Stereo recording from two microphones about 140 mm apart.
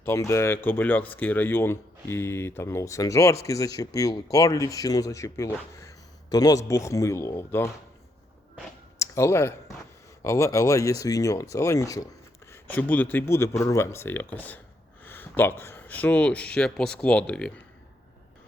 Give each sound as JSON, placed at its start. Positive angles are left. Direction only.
{"t": 0.0, "sound": "speech", "side_deg": 20}
{"t": 9.0, "sound": "speech", "side_deg": 20}
{"t": 12.5, "sound": "speech", "side_deg": 15}